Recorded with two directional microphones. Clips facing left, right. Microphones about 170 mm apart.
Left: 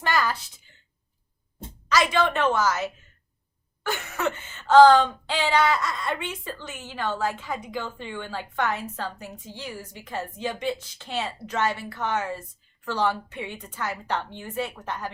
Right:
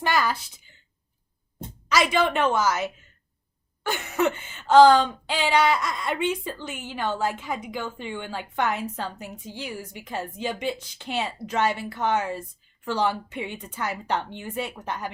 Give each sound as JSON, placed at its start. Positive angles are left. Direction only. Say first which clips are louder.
{"t": 0.0, "sound": "speech", "louder": "right 1 dB", "side_deg": -15}
{"t": 1.9, "sound": "speech", "louder": "even", "side_deg": -10}